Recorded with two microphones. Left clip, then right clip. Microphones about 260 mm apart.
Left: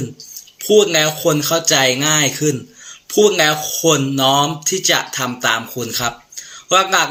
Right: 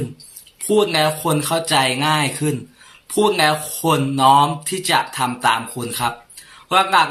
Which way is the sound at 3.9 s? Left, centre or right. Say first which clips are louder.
Right 2 dB; centre.